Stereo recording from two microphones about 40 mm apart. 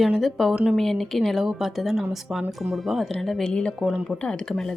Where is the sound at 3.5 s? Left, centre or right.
Centre.